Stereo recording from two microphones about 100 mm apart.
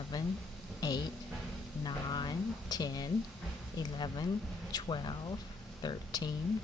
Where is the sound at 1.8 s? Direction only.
45° left (ahead or behind).